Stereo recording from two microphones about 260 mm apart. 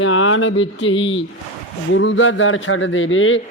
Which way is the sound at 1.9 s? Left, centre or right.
Left.